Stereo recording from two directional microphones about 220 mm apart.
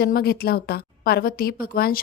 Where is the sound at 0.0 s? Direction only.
45° left (ahead or behind).